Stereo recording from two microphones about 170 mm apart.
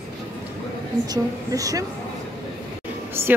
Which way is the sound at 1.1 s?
20° right (ahead or behind).